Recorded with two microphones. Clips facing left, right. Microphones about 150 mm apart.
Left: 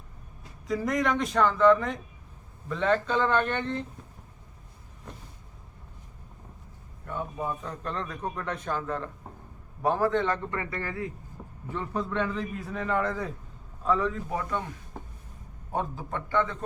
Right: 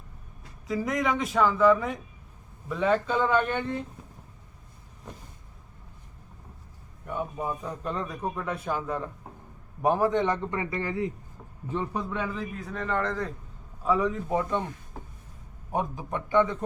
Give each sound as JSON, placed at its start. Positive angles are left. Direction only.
{"t": 0.7, "sound": "a man's voice", "side_deg": 0}
{"t": 7.0, "sound": "a man's voice", "side_deg": -15}
{"t": 13.8, "sound": "speech", "side_deg": -15}
{"t": 15.7, "sound": "a man's voice", "side_deg": -15}